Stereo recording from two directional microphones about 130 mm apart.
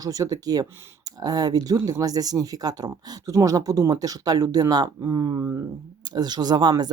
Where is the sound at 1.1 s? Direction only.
30° right (ahead or behind).